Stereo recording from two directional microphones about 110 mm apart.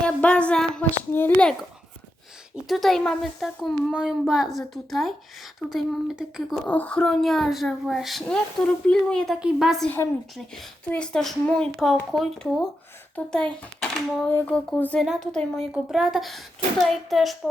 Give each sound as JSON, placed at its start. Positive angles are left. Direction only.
{"t": 0.0, "sound": "a sound", "side_deg": 10}
{"t": 1.1, "sound": "a child's voice", "side_deg": 20}
{"t": 2.6, "sound": "speech", "side_deg": 0}
{"t": 6.6, "sound": "speech", "side_deg": 15}
{"t": 9.3, "sound": "a woman's voice", "side_deg": -5}
{"t": 14.3, "sound": "a child's voice", "side_deg": 20}
{"t": 15.0, "sound": "speech", "side_deg": -5}